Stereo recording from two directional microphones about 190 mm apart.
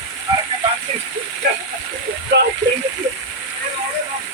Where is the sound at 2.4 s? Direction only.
65° right (ahead or behind).